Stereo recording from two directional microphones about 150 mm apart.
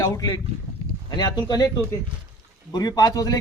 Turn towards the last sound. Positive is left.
turn(degrees=25)  # may be behind; listen again after turning